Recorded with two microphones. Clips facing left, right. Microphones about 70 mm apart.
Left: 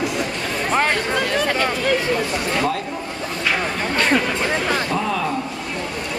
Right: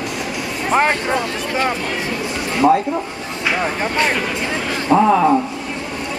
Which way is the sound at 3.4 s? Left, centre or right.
Right.